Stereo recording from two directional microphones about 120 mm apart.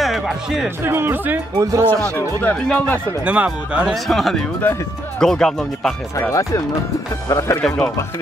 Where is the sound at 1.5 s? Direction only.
25° right (ahead or behind).